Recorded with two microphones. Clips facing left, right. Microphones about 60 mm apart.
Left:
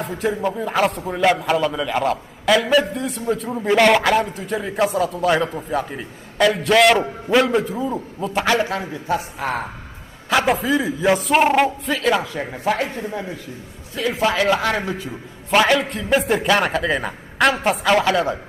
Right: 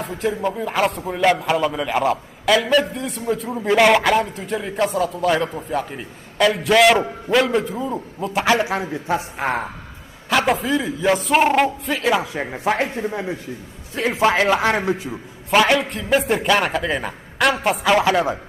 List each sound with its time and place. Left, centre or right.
0.0 s a man's voice: centre
8.9 s a woman's voice: right
10.3 s a man's voice: centre
12.3 s speech: centre
15.5 s a man's voice: centre